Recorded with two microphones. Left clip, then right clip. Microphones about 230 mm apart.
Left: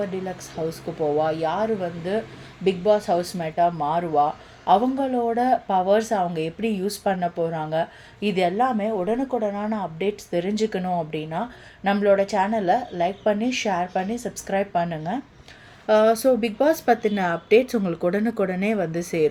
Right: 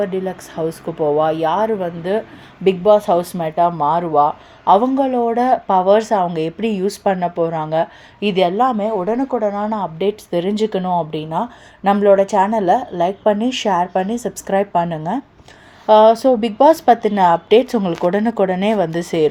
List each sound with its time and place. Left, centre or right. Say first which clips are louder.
0.0 s speech: right 8 dB; right
15.9 s speech: right 8 dB; centre